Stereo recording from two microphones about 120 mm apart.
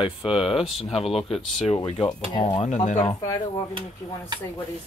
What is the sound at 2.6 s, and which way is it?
Speech, 75° left (ahead or behind).